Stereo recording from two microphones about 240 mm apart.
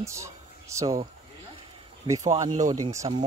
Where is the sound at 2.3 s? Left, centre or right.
Centre.